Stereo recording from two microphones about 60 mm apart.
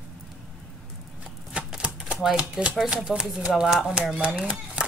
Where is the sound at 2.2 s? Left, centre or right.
Centre.